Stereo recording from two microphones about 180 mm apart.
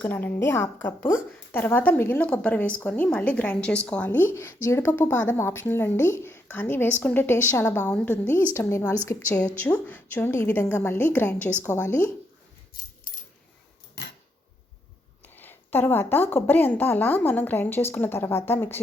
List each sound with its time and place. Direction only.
0.0 s a woman's voice: 10° left (ahead or behind)
15.4 s a woman's voice: 10° left (ahead or behind)